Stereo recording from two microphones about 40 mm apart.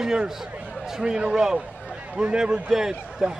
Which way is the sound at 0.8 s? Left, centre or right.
Centre.